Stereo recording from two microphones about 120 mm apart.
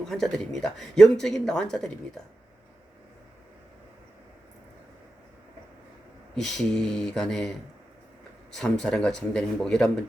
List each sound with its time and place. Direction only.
0.0 s speech: 5° left (ahead or behind)
6.3 s speech: centre (ahead or behind)
8.5 s speech: 5° left (ahead or behind)